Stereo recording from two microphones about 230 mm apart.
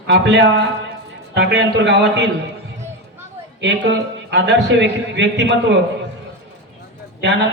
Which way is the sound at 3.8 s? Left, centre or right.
Right.